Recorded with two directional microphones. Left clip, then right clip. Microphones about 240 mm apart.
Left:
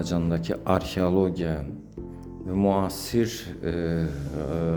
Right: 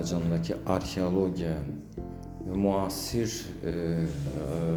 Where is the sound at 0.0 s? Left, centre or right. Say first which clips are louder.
Left 3 dB; left.